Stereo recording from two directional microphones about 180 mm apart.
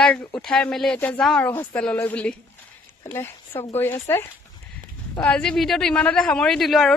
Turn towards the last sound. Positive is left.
turn(degrees=0)  # may be behind; listen again after turning